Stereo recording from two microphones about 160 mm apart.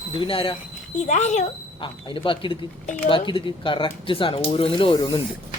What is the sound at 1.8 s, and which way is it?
Speech, 30° left (ahead or behind).